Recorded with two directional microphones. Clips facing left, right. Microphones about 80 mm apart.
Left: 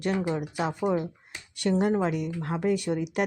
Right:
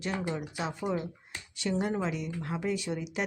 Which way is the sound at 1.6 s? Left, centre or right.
Left.